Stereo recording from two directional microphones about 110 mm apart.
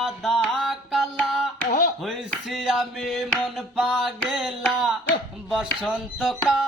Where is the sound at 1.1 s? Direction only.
5° left (ahead or behind).